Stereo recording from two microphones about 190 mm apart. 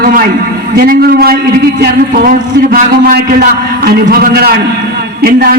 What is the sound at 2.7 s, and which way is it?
A man's voice, 50° right (ahead or behind).